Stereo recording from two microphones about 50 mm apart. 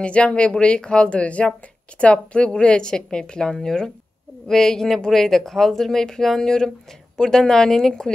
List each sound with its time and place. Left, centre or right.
0.0 s speech: left